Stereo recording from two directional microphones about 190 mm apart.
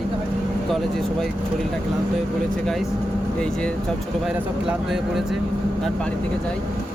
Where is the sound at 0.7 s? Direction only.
Centre (ahead or behind).